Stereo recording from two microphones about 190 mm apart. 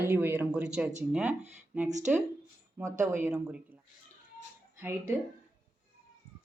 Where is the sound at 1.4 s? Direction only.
35° right (ahead or behind).